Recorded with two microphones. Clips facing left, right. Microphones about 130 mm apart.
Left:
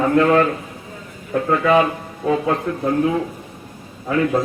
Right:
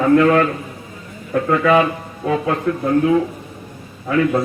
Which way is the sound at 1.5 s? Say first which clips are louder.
Right 1 dB; 25° left (ahead or behind).